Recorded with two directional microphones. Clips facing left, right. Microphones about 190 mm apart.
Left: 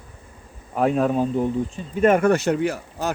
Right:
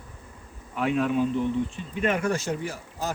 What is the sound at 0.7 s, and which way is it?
Speech, 40° left (ahead or behind).